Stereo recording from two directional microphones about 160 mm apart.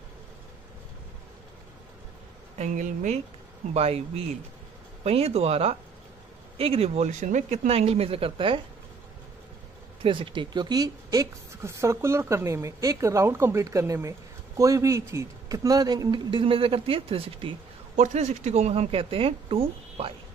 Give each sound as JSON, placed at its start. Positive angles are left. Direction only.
{"t": 2.5, "sound": "speech", "side_deg": -50}
{"t": 3.7, "sound": "speech", "side_deg": -40}
{"t": 10.0, "sound": "a woman's voice", "side_deg": -30}
{"t": 17.9, "sound": "speech", "side_deg": -50}